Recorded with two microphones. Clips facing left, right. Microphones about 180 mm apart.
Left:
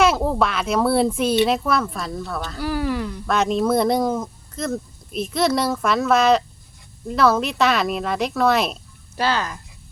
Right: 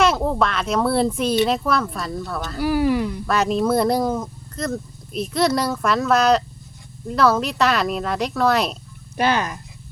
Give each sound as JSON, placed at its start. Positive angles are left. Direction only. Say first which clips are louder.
{"t": 0.0, "sound": "speech", "louder": "even", "side_deg": 5}
{"t": 3.3, "sound": "speech", "louder": "even", "side_deg": 0}
{"t": 9.1, "sound": "speech", "louder": "right 2 dB", "side_deg": -15}